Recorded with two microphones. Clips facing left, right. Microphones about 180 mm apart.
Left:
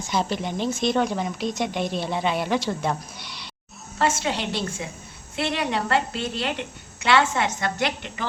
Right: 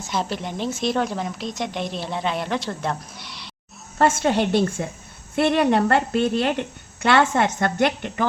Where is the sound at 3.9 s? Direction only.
50° right (ahead or behind).